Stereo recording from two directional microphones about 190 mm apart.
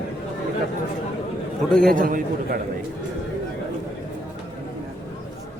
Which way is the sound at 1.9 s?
45° right (ahead or behind).